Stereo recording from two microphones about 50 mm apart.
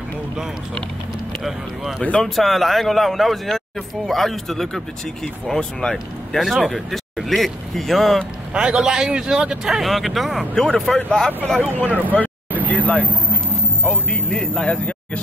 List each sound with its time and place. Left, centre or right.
2.2 s speech: centre
6.4 s speech: centre
8.5 s speech: centre
10.5 s speech: centre
12.1 s vehicle: left
14.1 s speech: centre